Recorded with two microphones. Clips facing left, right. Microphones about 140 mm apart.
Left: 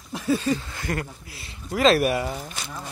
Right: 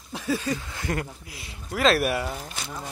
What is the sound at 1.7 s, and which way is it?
Speech, centre (ahead or behind).